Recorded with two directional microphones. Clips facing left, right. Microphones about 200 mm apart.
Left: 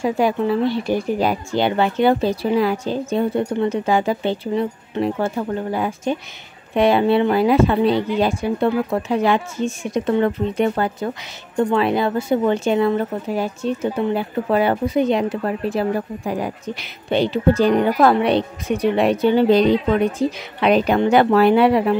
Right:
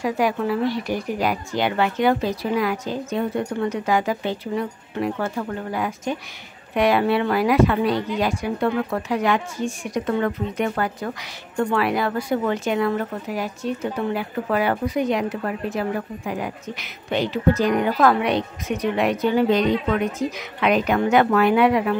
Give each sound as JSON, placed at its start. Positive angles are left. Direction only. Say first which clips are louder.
{"t": 0.0, "sound": "a woman's voice", "louder": "left 3 dB", "side_deg": 25}